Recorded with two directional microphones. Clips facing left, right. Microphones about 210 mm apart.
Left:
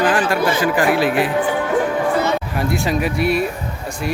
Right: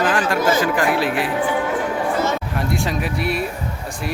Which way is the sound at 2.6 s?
Centre (ahead or behind).